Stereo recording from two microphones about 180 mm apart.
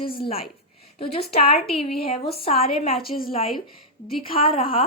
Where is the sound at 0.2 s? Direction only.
35° left (ahead or behind).